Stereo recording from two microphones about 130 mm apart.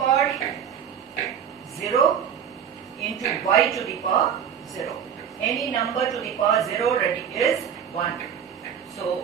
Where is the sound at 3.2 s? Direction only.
Centre (ahead or behind).